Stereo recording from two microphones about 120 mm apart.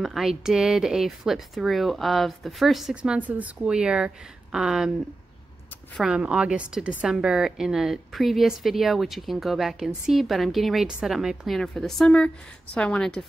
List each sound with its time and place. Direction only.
0.0 s a woman's voice: centre (ahead or behind)
5.9 s a woman's voice: 5° right (ahead or behind)